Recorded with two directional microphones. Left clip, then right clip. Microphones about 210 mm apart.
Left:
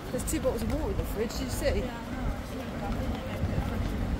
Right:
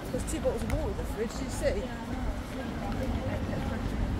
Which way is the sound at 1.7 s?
45° left (ahead or behind).